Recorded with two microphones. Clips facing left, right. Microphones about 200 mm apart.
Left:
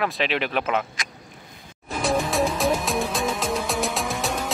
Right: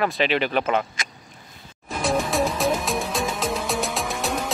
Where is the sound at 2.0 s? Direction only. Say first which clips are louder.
Even; centre (ahead or behind).